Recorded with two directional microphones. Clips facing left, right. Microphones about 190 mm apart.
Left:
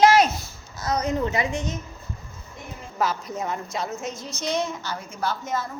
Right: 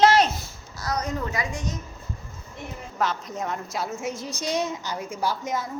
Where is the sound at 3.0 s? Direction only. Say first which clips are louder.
Left 1 dB; 5° left (ahead or behind); by 5.6 s 15° right (ahead or behind).